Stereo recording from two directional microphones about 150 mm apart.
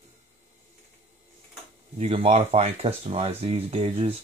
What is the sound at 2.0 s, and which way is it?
Speech, 40° right (ahead or behind).